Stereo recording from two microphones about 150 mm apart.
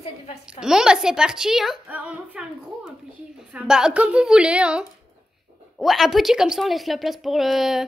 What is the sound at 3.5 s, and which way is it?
A woman's voice, 5° right (ahead or behind).